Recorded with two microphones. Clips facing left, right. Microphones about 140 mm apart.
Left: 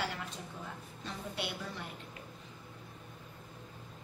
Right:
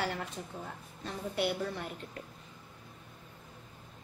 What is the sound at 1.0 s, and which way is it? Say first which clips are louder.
Speech: right 7 dB; 55° right (ahead or behind).